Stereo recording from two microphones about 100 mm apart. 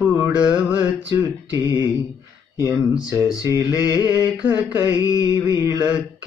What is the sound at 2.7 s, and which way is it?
Mantra, 10° right (ahead or behind).